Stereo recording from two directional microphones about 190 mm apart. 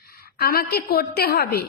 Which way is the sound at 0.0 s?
55° left (ahead or behind).